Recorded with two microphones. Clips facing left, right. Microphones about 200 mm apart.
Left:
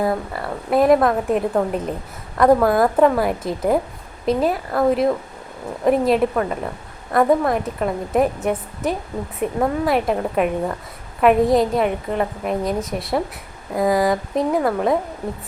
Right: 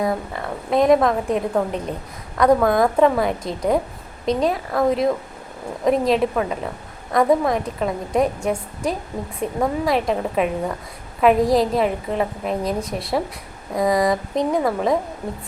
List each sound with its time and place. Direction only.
0.0 s a woman's voice: 5° left (ahead or behind)